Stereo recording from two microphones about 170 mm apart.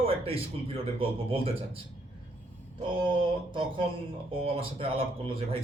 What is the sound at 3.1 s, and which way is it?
Speech, 30° right (ahead or behind).